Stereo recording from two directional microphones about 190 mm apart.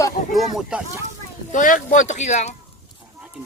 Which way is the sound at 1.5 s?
45° left (ahead or behind).